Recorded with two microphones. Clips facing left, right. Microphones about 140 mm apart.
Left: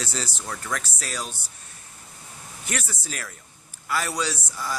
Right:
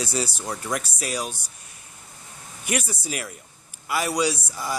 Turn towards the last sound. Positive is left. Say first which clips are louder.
# right 4 dB
turn(degrees=-15)  # may be behind; listen again after turning